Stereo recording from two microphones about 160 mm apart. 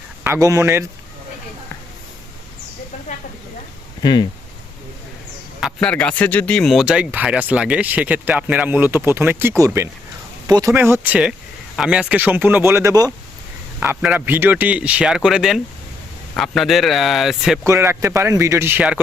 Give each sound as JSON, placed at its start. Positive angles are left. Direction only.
{"t": 0.3, "sound": "speech", "side_deg": -20}
{"t": 4.0, "sound": "speech", "side_deg": 30}
{"t": 5.5, "sound": "speech", "side_deg": 0}
{"t": 10.4, "sound": "a sound", "side_deg": -20}
{"t": 10.8, "sound": "a man's voice", "side_deg": -15}
{"t": 17.7, "sound": "speech", "side_deg": -15}